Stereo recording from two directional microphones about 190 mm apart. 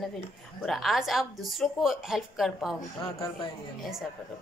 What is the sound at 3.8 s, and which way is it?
Speech, centre (ahead or behind).